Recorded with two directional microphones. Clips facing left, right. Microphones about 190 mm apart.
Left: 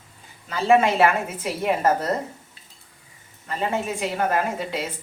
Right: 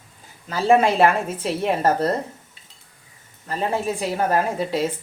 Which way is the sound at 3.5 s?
35° right (ahead or behind).